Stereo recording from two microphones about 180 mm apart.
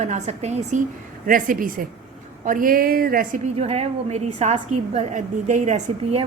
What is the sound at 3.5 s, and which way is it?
A woman's voice, 35° right (ahead or behind).